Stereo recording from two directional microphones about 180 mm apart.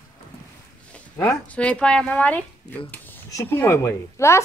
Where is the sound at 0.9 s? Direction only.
5° left (ahead or behind).